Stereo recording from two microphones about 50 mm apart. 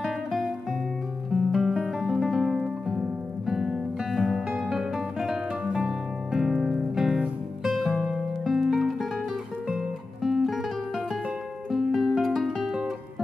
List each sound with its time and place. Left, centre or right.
1.3 s music: centre
8.0 s music: centre